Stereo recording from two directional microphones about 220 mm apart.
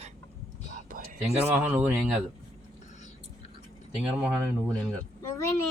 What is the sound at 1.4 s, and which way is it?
Speech, 10° right (ahead or behind).